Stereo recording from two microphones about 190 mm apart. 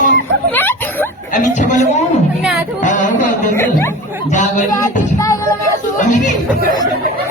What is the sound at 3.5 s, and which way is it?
Speech, 15° left (ahead or behind).